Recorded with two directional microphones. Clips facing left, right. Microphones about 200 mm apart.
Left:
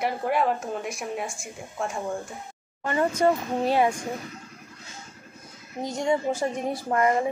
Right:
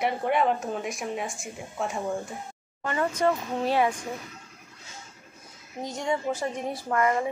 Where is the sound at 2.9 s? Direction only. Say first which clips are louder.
Left 3 dB; 30° left (ahead or behind).